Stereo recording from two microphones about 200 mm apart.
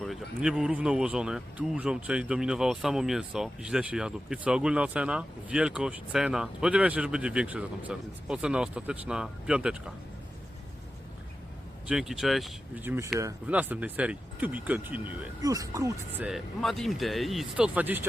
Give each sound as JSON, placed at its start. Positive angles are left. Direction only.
{"t": 0.0, "sound": "speech", "side_deg": 0}
{"t": 11.9, "sound": "speech", "side_deg": 0}
{"t": 16.2, "sound": "speech", "side_deg": 0}